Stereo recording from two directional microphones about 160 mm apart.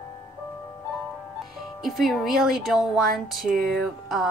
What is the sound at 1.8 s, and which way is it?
Speech, centre (ahead or behind).